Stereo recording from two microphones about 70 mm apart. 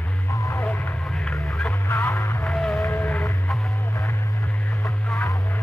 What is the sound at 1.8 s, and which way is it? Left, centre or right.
Music, left.